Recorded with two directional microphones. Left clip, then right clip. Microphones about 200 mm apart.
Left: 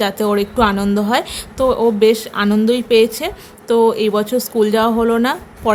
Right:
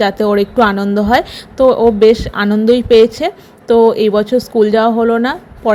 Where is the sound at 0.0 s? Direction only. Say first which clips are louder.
Right 4 dB; 15° right (ahead or behind).